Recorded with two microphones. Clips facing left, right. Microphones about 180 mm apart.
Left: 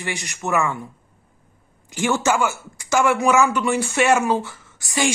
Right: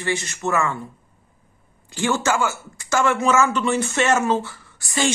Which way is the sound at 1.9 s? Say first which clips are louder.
Left 1 dB; 15° left (ahead or behind).